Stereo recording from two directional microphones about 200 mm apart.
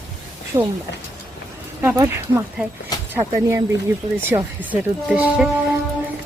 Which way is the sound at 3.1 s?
15° right (ahead or behind).